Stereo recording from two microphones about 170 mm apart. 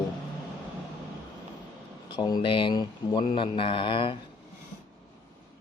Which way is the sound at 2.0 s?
25° left (ahead or behind).